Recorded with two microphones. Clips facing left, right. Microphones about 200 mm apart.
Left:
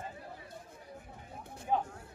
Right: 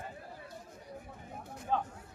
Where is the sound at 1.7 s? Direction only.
15° left (ahead or behind).